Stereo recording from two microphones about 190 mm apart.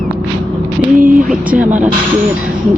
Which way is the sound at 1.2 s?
5° right (ahead or behind).